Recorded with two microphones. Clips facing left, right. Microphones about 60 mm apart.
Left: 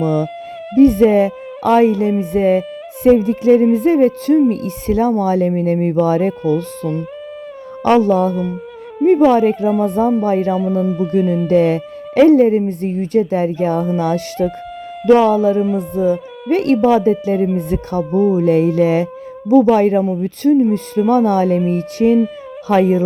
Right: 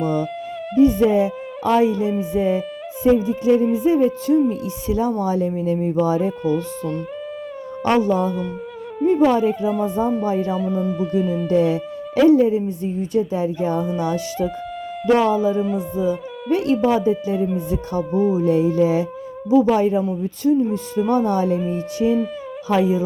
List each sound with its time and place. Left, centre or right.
0.8 s speech: left
8.0 s speech: left
10.6 s speech: centre
11.1 s speech: left
18.1 s speech: centre
18.3 s speech: left